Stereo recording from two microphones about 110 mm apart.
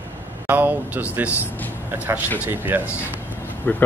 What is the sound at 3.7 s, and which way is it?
Speech, 15° left (ahead or behind).